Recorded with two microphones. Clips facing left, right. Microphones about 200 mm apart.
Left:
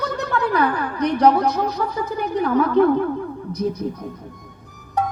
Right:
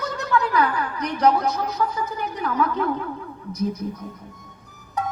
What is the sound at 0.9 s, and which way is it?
A woman's voice, 35° left (ahead or behind).